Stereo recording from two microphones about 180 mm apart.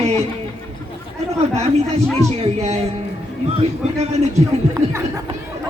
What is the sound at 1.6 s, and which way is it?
Speech, 35° right (ahead or behind).